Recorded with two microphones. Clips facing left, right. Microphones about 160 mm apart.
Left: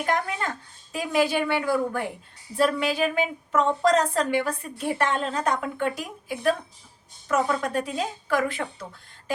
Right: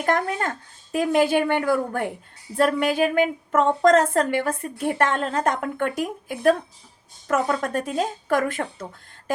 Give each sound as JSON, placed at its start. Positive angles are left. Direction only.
{"t": 0.0, "sound": "a woman's voice", "side_deg": -45}